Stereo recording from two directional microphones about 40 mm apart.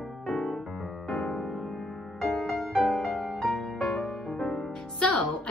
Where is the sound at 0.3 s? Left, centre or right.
Centre.